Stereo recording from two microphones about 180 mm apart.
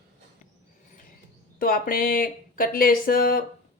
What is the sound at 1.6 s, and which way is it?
Speech, 50° left (ahead or behind).